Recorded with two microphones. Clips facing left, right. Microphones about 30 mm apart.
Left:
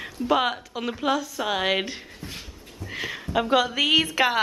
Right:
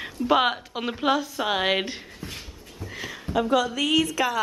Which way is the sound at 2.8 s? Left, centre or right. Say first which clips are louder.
Left 3 dB; left.